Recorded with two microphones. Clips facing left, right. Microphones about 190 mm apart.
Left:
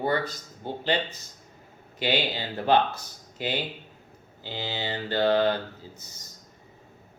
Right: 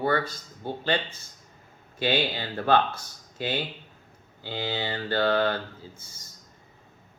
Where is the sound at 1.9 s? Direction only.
20° left (ahead or behind).